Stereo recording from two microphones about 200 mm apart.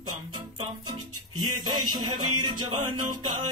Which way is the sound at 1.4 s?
20° right (ahead or behind).